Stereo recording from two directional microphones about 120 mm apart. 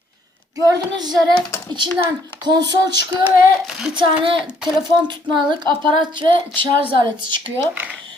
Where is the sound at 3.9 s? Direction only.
40° right (ahead or behind).